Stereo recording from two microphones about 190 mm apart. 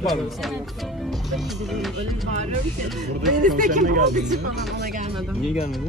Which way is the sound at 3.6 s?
45° right (ahead or behind).